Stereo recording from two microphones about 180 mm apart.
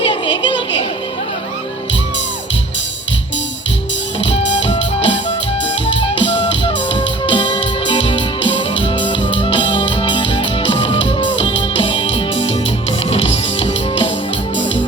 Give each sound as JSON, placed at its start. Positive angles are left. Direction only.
{"t": 0.0, "sound": "a sound", "side_deg": 30}
{"t": 4.2, "sound": "music", "side_deg": 90}
{"t": 4.6, "sound": "music", "side_deg": 30}
{"t": 6.7, "sound": "music", "side_deg": 25}
{"t": 12.0, "sound": "music", "side_deg": 90}